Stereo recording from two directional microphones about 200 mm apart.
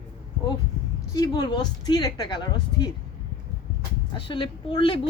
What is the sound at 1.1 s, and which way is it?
A woman's voice, 20° left (ahead or behind).